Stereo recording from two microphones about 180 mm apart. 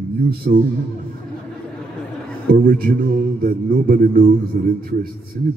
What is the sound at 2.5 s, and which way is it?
A man's voice, 50° right (ahead or behind).